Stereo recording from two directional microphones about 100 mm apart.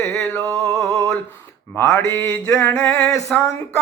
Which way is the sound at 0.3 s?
35° right (ahead or behind).